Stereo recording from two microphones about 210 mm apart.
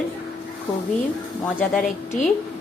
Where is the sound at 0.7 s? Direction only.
15° left (ahead or behind).